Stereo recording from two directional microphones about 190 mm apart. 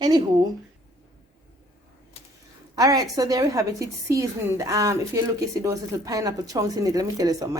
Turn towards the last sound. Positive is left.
turn(degrees=-20)  # may be behind; listen again after turning